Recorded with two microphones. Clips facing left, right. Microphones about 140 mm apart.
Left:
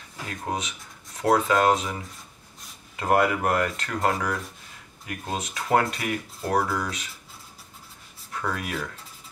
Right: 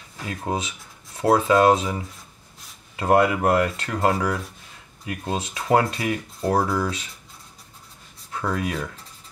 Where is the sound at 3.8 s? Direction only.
30° right (ahead or behind).